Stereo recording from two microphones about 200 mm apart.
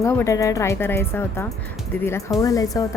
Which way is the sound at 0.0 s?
15° left (ahead or behind).